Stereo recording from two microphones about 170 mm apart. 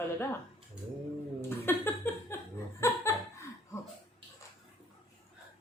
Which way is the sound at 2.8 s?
15° left (ahead or behind).